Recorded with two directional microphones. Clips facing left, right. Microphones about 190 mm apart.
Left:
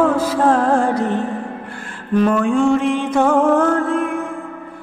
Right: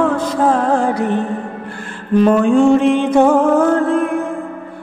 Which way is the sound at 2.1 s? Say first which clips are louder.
Right 4 dB; 25° right (ahead or behind).